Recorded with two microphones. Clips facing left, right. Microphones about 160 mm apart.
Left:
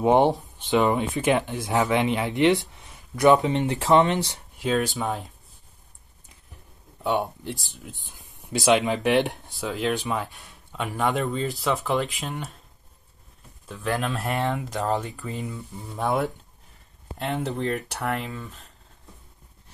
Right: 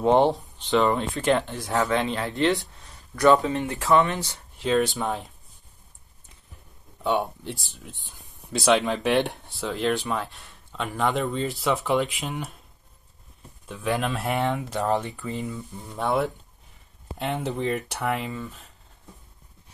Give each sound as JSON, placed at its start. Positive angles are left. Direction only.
{"t": 0.0, "sound": "speech", "side_deg": 10}
{"t": 4.6, "sound": "speech", "side_deg": 5}
{"t": 7.0, "sound": "speech", "side_deg": 5}
{"t": 13.7, "sound": "speech", "side_deg": 0}